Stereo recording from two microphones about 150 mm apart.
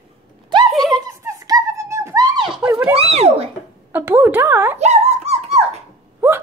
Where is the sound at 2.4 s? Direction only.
Centre (ahead or behind).